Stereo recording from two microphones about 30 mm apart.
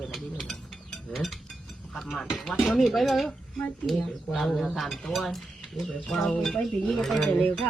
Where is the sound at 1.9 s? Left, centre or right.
Centre.